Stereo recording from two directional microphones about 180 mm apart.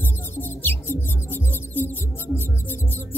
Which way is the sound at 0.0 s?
10° left (ahead or behind).